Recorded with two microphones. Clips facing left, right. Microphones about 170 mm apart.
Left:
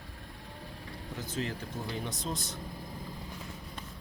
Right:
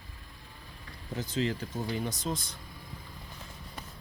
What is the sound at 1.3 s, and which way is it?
Speech, 90° right.